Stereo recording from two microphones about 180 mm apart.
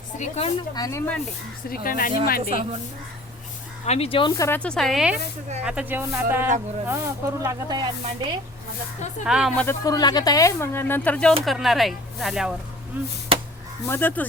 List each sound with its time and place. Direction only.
0.2 s speech: 35° left (ahead or behind)
0.7 s speech: 20° left (ahead or behind)
1.7 s speech: 50° left (ahead or behind)
3.8 s speech: 35° left (ahead or behind)
4.4 s speech: 15° left (ahead or behind); by 8.4 s 25° right (ahead or behind)
9.2 s speech: 5° right (ahead or behind)
9.6 s speech: 15° left (ahead or behind); by 13.1 s 10° right (ahead or behind)
13.8 s speech: 10° left (ahead or behind)